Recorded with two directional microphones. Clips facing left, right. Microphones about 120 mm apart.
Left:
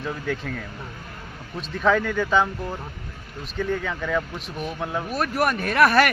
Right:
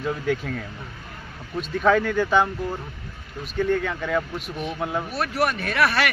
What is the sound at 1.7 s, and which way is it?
Speech, centre (ahead or behind).